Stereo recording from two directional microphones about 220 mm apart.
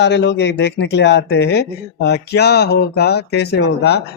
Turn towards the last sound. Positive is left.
turn(degrees=50)  # may be behind; listen again after turning